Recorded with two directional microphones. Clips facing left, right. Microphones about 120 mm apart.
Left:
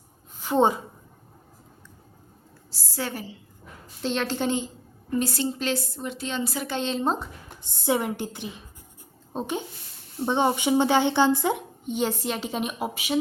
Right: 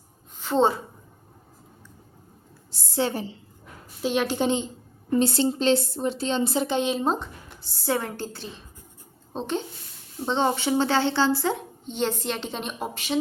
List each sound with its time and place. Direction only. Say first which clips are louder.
0.3 s a woman's voice: even; 10° left (ahead or behind)
2.9 s speech: right 6 dB; 25° right (ahead or behind)
4.0 s a woman's voice: right 2 dB; 10° right (ahead or behind)
7.0 s speech: right 1 dB; centre (ahead or behind)
7.6 s speech: left 2 dB; 20° left (ahead or behind)